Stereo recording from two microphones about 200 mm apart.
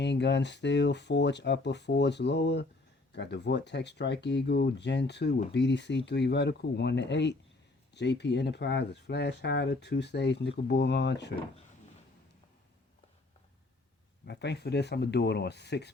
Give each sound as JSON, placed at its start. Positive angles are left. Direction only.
{"t": 0.0, "sound": "speech", "side_deg": 60}
{"t": 14.3, "sound": "speech", "side_deg": 55}